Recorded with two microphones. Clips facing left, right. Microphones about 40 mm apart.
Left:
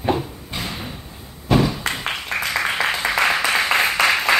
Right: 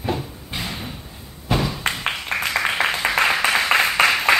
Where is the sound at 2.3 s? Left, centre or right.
Right.